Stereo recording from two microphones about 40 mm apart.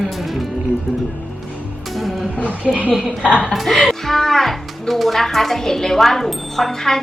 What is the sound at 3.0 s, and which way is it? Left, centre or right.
Speech, right.